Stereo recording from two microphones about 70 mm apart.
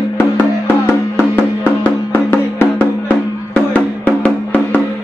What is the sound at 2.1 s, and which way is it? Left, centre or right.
Music, left.